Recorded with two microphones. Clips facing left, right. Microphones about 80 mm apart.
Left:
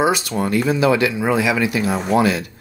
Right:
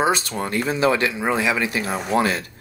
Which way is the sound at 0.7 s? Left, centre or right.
Right.